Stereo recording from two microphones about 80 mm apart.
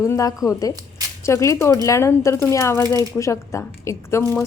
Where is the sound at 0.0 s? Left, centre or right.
Left.